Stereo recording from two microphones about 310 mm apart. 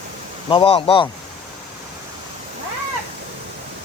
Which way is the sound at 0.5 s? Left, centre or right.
Centre.